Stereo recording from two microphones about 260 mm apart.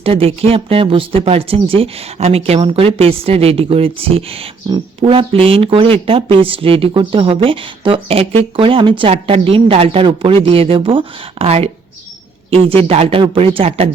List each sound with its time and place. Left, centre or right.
0.0 s speech: right